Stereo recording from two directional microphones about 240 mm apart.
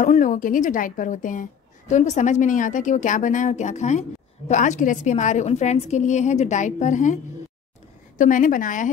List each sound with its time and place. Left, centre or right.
0.0 s a woman's voice: left
8.2 s a woman's voice: left